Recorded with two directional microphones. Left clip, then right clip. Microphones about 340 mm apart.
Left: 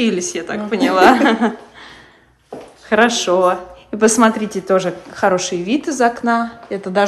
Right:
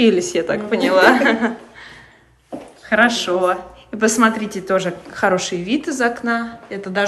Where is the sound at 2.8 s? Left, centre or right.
Centre.